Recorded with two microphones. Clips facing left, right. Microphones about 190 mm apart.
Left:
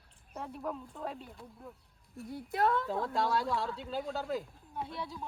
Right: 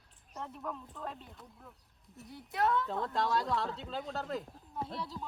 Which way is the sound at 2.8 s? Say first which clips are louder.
Left 1 dB; centre (ahead or behind).